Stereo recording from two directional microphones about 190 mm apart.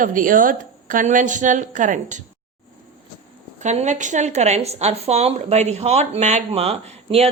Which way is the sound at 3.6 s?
40° right (ahead or behind).